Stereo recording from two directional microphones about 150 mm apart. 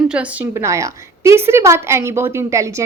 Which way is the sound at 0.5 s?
20° right (ahead or behind).